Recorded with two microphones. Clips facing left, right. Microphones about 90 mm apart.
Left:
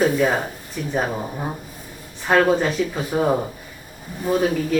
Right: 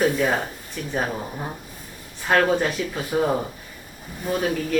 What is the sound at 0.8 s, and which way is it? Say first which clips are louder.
Speech: left 4 dB; 5° left (ahead or behind).